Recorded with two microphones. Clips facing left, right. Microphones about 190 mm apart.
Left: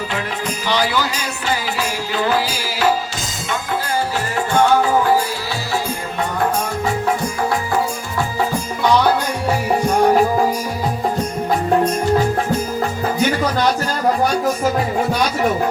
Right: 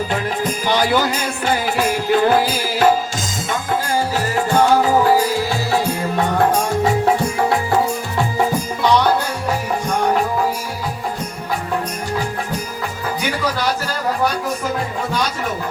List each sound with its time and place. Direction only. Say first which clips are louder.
0.1 s music: right 3 dB; 50° right (ahead or behind)